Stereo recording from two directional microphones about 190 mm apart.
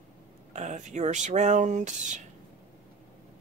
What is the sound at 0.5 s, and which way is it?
Speech, 40° right (ahead or behind).